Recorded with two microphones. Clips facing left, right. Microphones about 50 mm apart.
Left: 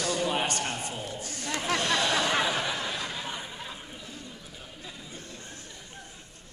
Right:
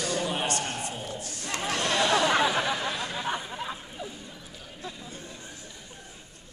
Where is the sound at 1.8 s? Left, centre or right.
Right.